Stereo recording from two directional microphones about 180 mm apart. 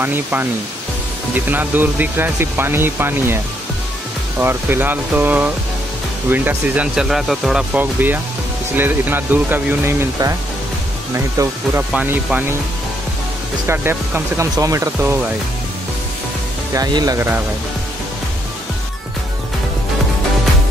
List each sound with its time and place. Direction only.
0.0 s speech: 10° right (ahead or behind)
4.4 s speech: 10° right (ahead or behind)
13.7 s speech: 15° right (ahead or behind)
16.7 s speech: 20° right (ahead or behind)